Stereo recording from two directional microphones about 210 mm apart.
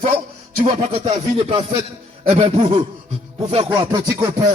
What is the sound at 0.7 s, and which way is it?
Speech, 30° right (ahead or behind).